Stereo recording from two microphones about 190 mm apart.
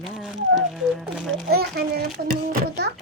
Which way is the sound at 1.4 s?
55° right (ahead or behind).